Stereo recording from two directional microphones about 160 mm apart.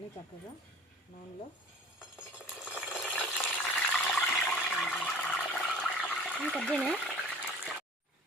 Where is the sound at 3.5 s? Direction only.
10° left (ahead or behind).